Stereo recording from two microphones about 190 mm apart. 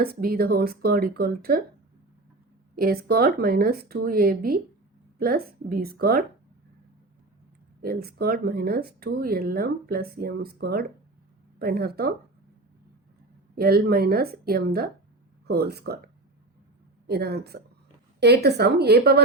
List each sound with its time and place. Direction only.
0.0 s speech: 50° right (ahead or behind)
2.7 s speech: 50° right (ahead or behind)
7.8 s speech: 55° right (ahead or behind)
13.6 s speech: 55° right (ahead or behind)
17.1 s speech: 55° right (ahead or behind)